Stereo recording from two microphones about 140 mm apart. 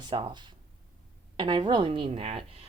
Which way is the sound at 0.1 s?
35° right (ahead or behind).